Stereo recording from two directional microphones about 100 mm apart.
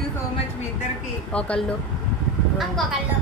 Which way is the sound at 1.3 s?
10° left (ahead or behind).